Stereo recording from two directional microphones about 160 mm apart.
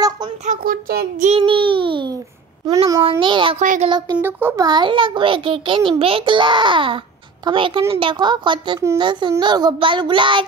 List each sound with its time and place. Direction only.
0.5 s child singing: 65° right (ahead or behind)
1.2 s a sound: 35° right (ahead or behind)
3.0 s a child's voice: 30° right (ahead or behind)
3.5 s speech: 50° right (ahead or behind)
4.2 s a child's voice: 15° right (ahead or behind)
4.6 s a child's voice: 30° right (ahead or behind)
7.9 s child singing: 30° right (ahead or behind)